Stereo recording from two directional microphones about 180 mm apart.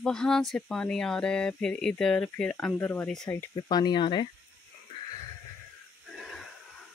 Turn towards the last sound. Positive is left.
turn(degrees=0)  # may be behind; listen again after turning